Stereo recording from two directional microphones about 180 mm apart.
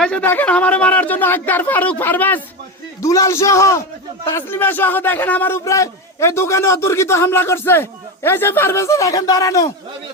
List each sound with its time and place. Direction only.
0.0 s a man's voice: 10° left (ahead or behind)